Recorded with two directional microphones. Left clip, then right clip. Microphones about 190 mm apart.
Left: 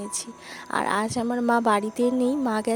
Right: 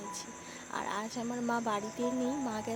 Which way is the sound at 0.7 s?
55° left (ahead or behind).